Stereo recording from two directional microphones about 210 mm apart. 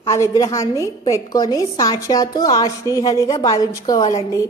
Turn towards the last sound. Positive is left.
turn(degrees=15)  # may be behind; listen again after turning